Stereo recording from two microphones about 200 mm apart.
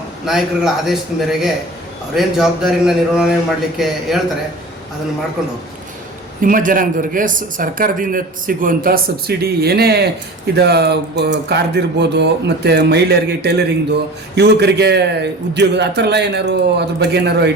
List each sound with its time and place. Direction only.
0.3 s speech: centre (ahead or behind)
6.4 s a man's voice: 40° right (ahead or behind)